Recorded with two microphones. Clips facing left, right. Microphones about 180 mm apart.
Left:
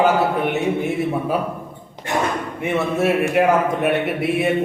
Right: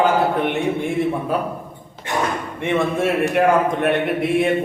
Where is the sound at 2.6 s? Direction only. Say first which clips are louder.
Right 1 dB; 5° left (ahead or behind).